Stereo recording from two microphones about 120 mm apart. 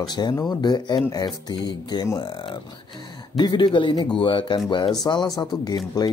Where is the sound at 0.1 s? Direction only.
35° left (ahead or behind).